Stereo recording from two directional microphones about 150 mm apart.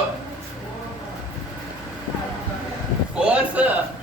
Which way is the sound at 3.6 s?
10° right (ahead or behind).